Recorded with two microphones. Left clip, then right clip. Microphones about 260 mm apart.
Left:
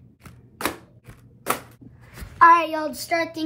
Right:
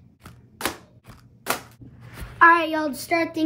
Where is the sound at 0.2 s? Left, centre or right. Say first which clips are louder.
Left 1 dB; centre.